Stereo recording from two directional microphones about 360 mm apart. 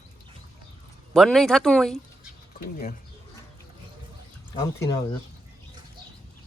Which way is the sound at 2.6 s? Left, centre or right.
Left.